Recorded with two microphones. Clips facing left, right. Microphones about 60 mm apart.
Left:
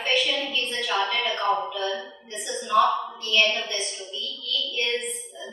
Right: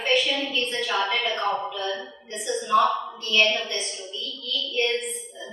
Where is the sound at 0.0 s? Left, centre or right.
Centre.